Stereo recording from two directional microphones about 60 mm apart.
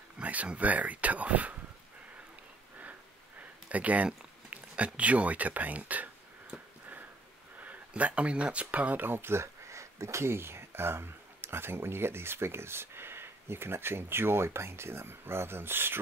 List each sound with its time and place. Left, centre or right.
0.2 s speech: right
3.6 s speech: right
7.6 s speech: right